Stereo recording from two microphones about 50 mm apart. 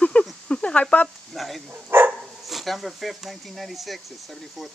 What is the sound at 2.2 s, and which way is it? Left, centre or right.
Speech, centre.